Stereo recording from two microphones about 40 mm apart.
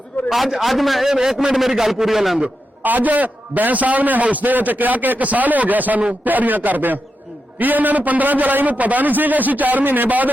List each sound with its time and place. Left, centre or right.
0.3 s a man's voice: centre
1.1 s a man's voice: centre
2.8 s a man's voice: right